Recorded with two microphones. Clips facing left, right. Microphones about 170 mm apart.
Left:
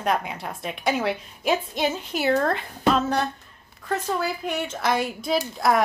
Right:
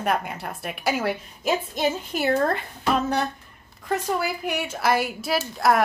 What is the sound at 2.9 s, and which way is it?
A woman's voice, 10° right (ahead or behind).